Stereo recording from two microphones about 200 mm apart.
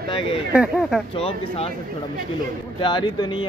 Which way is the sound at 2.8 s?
25° left (ahead or behind).